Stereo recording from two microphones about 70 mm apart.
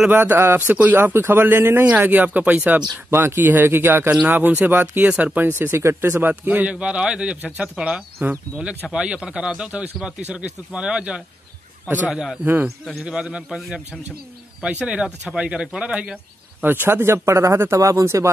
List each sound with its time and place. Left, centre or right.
0.1 s speech: right
0.9 s speech: right
3.1 s speech: right
5.5 s speech: right
6.2 s speech: right; by 13.0 s centre
13.0 s speech: centre
13.6 s speech: centre
14.6 s speech: centre
16.6 s speech: right